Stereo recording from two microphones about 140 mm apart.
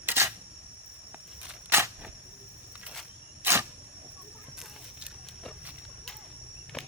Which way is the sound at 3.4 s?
15° right (ahead or behind).